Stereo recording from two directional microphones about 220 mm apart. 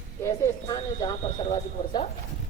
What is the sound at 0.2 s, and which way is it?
Speech, 15° left (ahead or behind).